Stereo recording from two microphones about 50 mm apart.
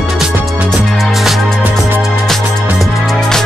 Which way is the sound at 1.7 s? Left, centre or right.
Right.